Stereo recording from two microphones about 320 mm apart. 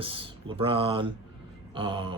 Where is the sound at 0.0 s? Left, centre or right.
Centre.